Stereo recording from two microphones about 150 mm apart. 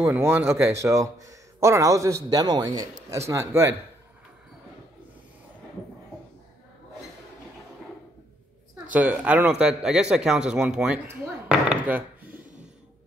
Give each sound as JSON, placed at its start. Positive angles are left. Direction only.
{"t": 0.0, "sound": "speech", "side_deg": -15}
{"t": 8.9, "sound": "a man's voice", "side_deg": -10}